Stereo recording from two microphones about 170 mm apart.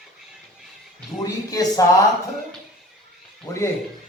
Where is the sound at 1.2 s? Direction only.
20° left (ahead or behind).